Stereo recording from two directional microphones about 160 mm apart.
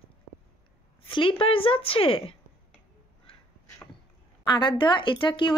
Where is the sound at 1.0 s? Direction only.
35° left (ahead or behind).